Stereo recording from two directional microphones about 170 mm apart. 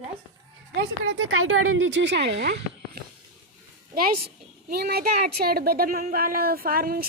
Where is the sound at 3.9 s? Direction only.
60° right (ahead or behind).